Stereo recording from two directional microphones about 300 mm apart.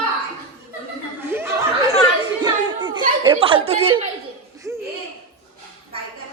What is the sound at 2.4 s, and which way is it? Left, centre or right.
Children playing, centre.